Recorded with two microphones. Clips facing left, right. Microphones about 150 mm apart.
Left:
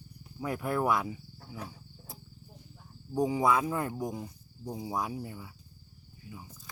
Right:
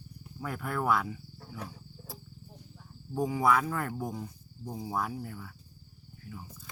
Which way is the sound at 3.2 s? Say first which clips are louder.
Even; 20° left (ahead or behind).